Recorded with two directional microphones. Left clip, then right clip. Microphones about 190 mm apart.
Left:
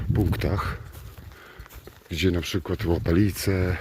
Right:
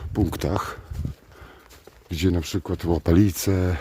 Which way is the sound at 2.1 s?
30° right (ahead or behind).